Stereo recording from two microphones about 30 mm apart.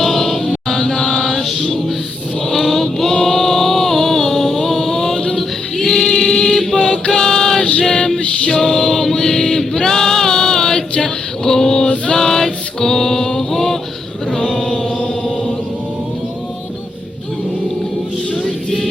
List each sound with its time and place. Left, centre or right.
0.0 s chant: centre
1.4 s choir: centre
2.5 s a sound: centre
7.1 s music: centre
8.5 s choir: centre
11.4 s male singing: centre
12.1 s music: centre
14.3 s chant: left
18.4 s music: left